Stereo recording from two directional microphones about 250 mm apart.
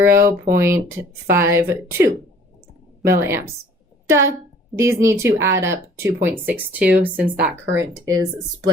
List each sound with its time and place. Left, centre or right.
0.0 s speech: centre